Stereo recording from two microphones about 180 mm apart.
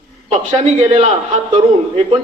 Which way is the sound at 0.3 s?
35° right (ahead or behind).